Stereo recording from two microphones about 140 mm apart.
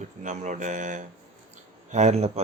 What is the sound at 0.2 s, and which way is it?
Speech, 60° right (ahead or behind).